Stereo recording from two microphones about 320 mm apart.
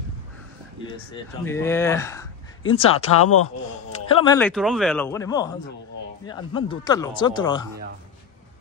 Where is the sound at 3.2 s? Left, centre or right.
Left.